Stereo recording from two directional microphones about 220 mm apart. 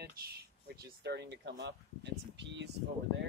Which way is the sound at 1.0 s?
50° right (ahead or behind).